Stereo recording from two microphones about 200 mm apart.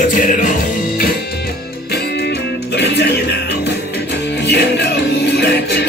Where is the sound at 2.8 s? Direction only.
55° left (ahead or behind).